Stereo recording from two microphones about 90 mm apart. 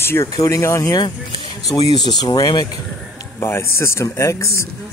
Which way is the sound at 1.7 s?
50° left (ahead or behind).